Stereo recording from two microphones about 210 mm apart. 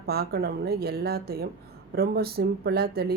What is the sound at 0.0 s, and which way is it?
A woman's voice, 50° right (ahead or behind).